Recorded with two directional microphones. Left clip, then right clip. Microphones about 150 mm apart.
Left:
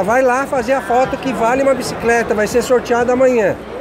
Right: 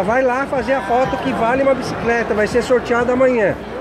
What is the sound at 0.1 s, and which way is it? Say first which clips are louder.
Speech: left 3 dB; 35° left (ahead or behind).